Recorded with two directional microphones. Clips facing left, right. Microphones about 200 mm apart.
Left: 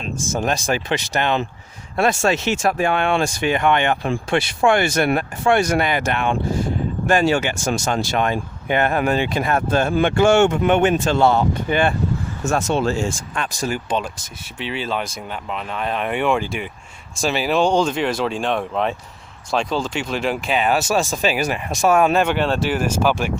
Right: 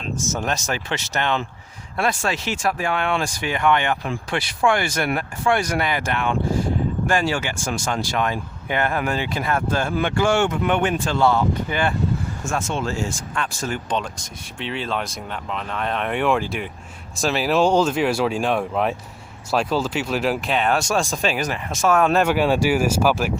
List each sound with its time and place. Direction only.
0.3 s speech: 15° left (ahead or behind)
12.5 s speech: 40° left (ahead or behind)
13.3 s speech: 15° left (ahead or behind)
22.1 s speech: 5° right (ahead or behind)